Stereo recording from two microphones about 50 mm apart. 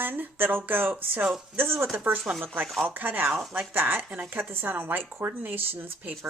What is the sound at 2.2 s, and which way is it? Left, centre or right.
Speech, centre.